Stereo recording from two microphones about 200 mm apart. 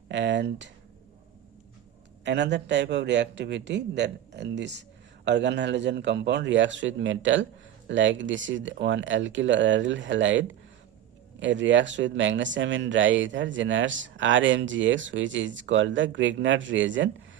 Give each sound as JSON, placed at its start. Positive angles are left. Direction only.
{"t": 0.1, "sound": "speech", "side_deg": -65}
{"t": 2.2, "sound": "speech", "side_deg": -60}